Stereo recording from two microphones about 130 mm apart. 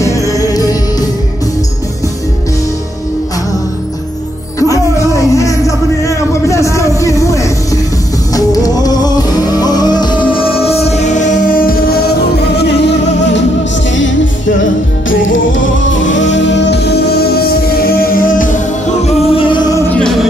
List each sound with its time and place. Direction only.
0.0 s music: 25° left (ahead or behind)
4.6 s music: 25° left (ahead or behind); by 11.7 s 80° left
18.1 s music: 90° left
19.0 s music: 45° left (ahead or behind)
19.9 s music: 5° left (ahead or behind)